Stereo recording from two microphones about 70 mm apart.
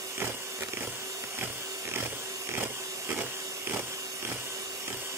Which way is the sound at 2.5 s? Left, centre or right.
Right.